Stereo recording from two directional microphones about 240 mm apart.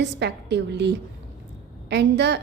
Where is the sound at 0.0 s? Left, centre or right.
Right.